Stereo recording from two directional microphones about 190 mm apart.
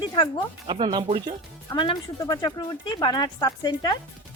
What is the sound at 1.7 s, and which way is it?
Speech, 25° left (ahead or behind).